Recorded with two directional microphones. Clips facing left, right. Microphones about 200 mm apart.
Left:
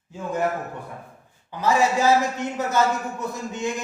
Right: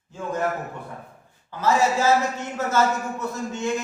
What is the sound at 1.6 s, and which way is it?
Speech, 15° left (ahead or behind).